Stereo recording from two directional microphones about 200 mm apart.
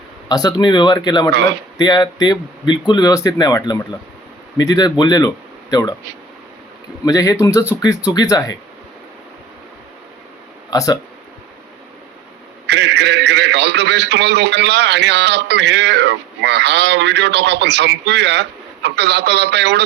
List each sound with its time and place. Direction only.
0.3 s speech: 20° left (ahead or behind)
7.0 s speech: 15° left (ahead or behind)
10.7 s speech: 20° left (ahead or behind)
12.6 s a man's voice: 60° right (ahead or behind)